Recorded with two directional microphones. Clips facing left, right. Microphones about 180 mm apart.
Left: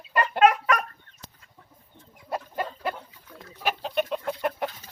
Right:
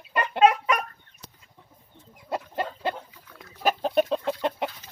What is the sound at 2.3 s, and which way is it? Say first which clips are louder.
Chicken: right 1 dB; 25° right (ahead or behind).